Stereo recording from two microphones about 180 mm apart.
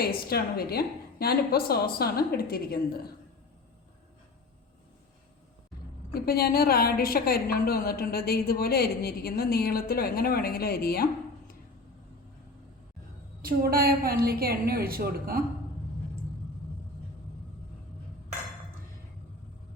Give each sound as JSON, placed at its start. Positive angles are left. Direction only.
{"t": 0.0, "sound": "a woman's voice", "side_deg": 60}
{"t": 6.1, "sound": "a woman's voice", "side_deg": 60}
{"t": 13.4, "sound": "a woman's voice", "side_deg": -55}